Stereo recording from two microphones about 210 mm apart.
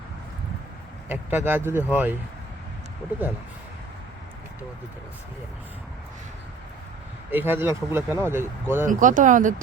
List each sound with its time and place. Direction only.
1.0 s speech: 10° right (ahead or behind)
7.3 s speech: 10° right (ahead or behind)
8.9 s speech: 40° right (ahead or behind)